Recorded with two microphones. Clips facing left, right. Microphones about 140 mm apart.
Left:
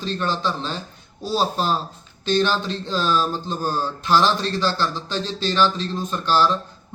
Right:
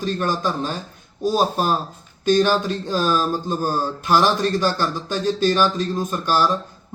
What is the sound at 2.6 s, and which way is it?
Speech, 45° right (ahead or behind).